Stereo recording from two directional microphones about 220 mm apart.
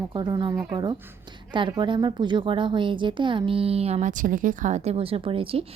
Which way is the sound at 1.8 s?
20° right (ahead or behind).